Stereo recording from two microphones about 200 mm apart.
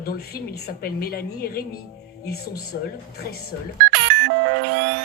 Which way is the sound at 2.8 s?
50° left (ahead or behind).